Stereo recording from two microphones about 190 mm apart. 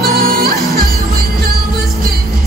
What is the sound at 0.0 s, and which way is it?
Music, 50° right (ahead or behind).